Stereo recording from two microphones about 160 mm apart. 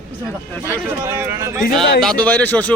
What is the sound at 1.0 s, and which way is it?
Speech, 15° right (ahead or behind).